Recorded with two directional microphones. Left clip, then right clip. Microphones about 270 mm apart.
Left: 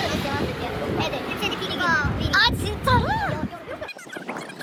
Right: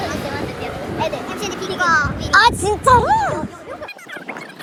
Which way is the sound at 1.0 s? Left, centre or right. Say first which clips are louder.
Right 6 dB; centre.